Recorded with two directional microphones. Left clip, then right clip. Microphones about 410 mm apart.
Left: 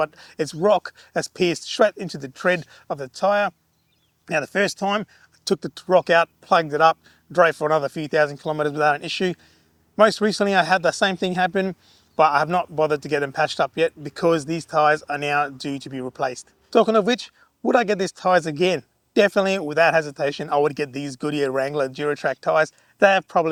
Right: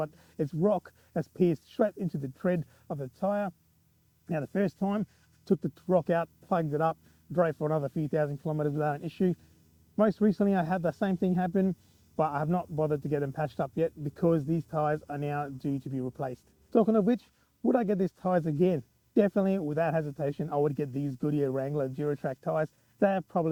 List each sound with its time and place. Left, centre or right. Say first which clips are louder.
0.0 s speech: left 10 dB; centre